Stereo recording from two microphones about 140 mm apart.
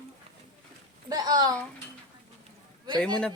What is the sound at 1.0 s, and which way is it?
Speech, 25° right (ahead or behind).